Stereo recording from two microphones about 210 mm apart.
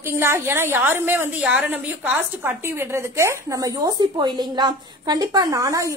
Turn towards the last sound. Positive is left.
turn(degrees=-15)  # may be behind; listen again after turning